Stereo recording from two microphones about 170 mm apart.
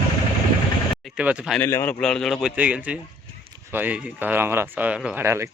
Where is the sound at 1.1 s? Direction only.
5° right (ahead or behind).